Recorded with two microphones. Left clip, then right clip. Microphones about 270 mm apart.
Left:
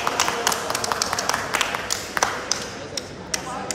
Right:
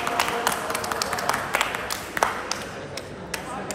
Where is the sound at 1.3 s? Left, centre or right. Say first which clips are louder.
Right 1 dB; right.